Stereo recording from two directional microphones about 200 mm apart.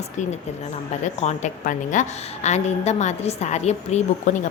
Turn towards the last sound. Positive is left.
turn(degrees=35)  # may be behind; listen again after turning